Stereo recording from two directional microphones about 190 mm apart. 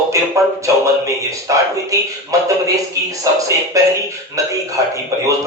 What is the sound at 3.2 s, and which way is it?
Music, 15° right (ahead or behind).